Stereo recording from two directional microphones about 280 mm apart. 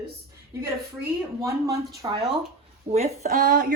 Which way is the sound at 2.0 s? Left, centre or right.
Centre.